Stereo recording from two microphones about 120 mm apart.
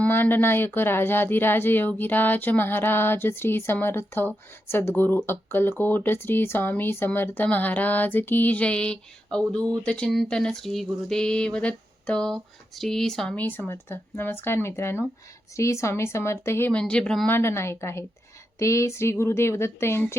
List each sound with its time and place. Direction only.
0.0 s speech: 15° left (ahead or behind)
16.7 s speech: 10° left (ahead or behind)
17.2 s speech: 20° left (ahead or behind)